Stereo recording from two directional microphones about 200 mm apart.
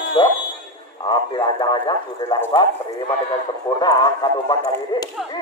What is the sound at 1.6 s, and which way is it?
Speech, 20° left (ahead or behind).